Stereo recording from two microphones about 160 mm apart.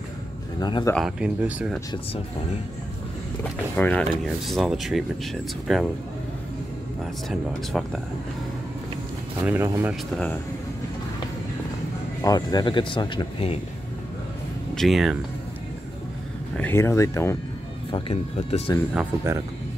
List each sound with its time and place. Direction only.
0.6 s speech: 25° left (ahead or behind)
0.9 s speech: 5° right (ahead or behind)
3.7 s speech: 10° left (ahead or behind)
7.2 s speech: centre (ahead or behind)
9.4 s speech: 15° right (ahead or behind)
12.2 s speech: 25° left (ahead or behind)
14.8 s speech: centre (ahead or behind)
16.5 s speech: 15° left (ahead or behind)
17.9 s speech: 35° left (ahead or behind)